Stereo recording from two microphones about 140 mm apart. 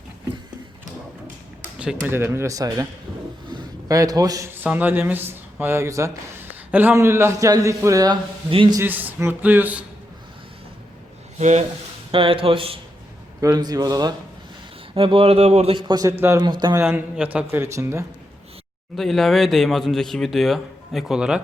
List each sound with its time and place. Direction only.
2.0 s a man's voice: 15° right (ahead or behind)
8.4 s a man's voice: 40° right (ahead or behind)
8.8 s a man's voice: 15° right (ahead or behind)
11.3 s speech: 55° right (ahead or behind)
12.1 s a man's voice: 40° right (ahead or behind)
13.4 s a man's voice: 30° right (ahead or behind)
14.9 s a man's voice: 40° right (ahead or behind)
16.1 s a man's voice: 15° right (ahead or behind)
16.4 s a man's voice: 30° right (ahead or behind)
16.7 s a man's voice: 15° right (ahead or behind)
18.9 s speech: centre (ahead or behind)